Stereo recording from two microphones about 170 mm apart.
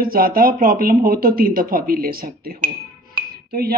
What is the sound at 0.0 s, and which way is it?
A man's voice, 60° right (ahead or behind).